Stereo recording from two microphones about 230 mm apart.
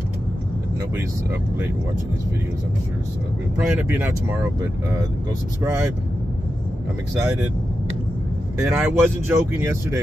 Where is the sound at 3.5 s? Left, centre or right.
Centre.